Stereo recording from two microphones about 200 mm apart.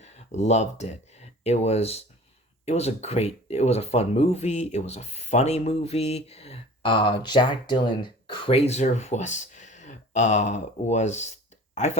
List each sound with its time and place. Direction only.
0.0 s speech: 35° left (ahead or behind)